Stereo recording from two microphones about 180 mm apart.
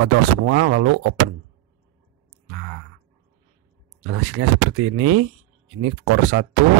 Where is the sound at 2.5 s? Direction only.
90° right.